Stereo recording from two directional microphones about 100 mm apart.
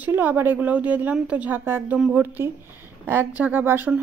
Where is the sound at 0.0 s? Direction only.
15° right (ahead or behind).